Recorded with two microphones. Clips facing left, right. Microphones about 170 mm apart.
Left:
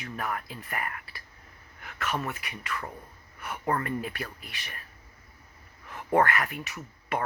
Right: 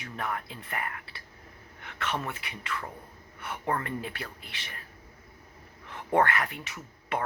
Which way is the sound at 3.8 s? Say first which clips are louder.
Left 3 dB; 25° right (ahead or behind).